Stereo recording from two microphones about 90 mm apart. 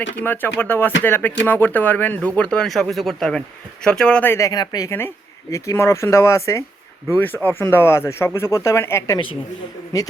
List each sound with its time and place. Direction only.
0.2 s speech: 25° left (ahead or behind)
2.6 s speech: centre (ahead or behind)
4.2 s speech: 30° left (ahead or behind)
4.5 s a woman's voice: 50° left (ahead or behind)
4.9 s speech: 30° left (ahead or behind)
7.1 s speech: 20° left (ahead or behind)
9.1 s a woman's voice: 75° left (ahead or behind)